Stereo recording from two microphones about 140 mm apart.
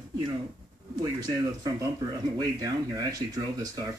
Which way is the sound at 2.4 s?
25° right (ahead or behind).